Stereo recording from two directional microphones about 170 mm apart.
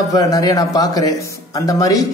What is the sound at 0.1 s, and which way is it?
Speech, 20° left (ahead or behind).